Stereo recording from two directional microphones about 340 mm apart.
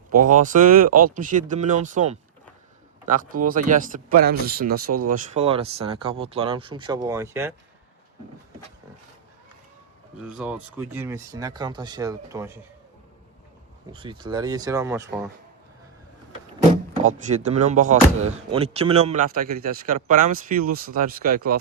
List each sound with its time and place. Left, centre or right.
0.1 s speech: right
3.1 s speech: right; by 7.5 s centre
10.2 s speech: centre
13.9 s speech: centre
16.9 s speech: right